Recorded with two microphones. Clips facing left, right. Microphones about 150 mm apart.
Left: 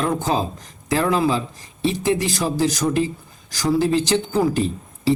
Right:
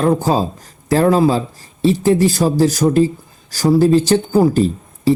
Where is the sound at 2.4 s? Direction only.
40° right (ahead or behind).